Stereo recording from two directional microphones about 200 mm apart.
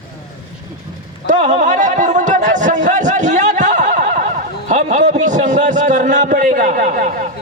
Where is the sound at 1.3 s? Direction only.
35° right (ahead or behind).